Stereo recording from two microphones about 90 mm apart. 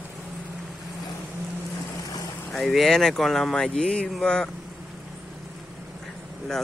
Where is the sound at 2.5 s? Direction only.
5° left (ahead or behind).